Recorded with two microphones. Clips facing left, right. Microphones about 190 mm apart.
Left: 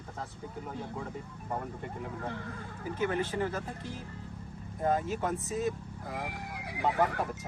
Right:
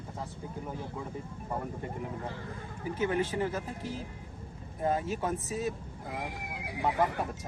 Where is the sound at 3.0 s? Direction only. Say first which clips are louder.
Right 1 dB; 15° right (ahead or behind).